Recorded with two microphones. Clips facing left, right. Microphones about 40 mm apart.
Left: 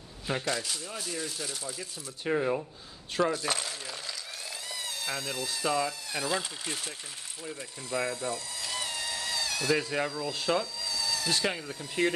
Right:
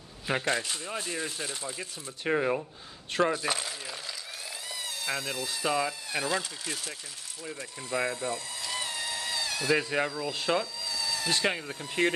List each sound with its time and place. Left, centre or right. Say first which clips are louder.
0.3 s speech: right 3 dB; right
3.1 s coin: right 1 dB; right
3.4 s speech: right 1 dB; centre
4.6 s a sound: right 2 dB; centre
5.5 s speech: even; centre
6.6 s speech: even; left
7.9 s speech: right 1 dB; right
8.6 s a sound: right 1 dB; centre
9.8 s speech: right 2 dB; right
10.0 s speech: right 1 dB; centre
10.3 s speech: even; right
10.6 s a sound: even; centre
11.2 s speech: right 3 dB; right